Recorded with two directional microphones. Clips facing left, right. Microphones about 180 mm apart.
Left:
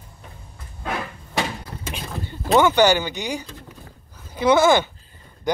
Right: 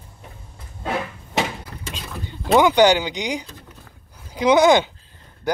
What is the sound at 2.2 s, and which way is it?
Speech, 15° right (ahead or behind).